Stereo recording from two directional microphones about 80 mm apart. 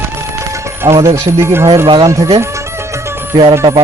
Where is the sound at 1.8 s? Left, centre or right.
Right.